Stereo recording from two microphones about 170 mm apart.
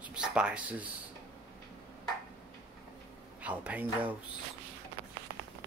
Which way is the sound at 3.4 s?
10° right (ahead or behind).